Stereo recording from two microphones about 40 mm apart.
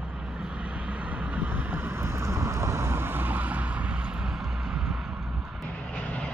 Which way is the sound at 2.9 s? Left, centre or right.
Right.